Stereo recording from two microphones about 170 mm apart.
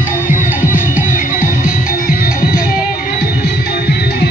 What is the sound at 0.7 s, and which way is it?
Music, 55° left (ahead or behind).